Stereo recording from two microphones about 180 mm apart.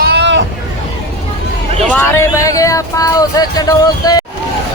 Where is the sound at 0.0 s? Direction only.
70° right (ahead or behind).